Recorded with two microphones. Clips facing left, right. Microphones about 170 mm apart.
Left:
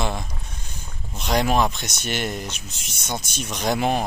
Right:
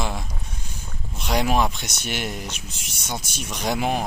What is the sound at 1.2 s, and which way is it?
Speech, 5° right (ahead or behind).